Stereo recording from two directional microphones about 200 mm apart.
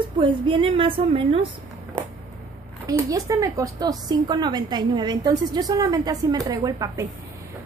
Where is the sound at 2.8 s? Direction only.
15° right (ahead or behind).